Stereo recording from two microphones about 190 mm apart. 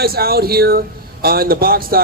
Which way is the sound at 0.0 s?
55° right (ahead or behind).